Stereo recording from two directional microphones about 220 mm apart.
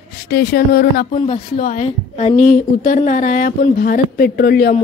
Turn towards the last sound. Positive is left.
turn(degrees=45)  # may be behind; listen again after turning